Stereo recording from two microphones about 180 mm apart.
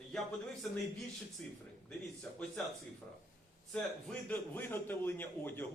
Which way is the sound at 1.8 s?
5° left (ahead or behind).